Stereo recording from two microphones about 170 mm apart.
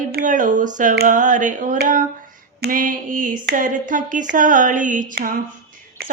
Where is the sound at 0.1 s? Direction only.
55° right (ahead or behind).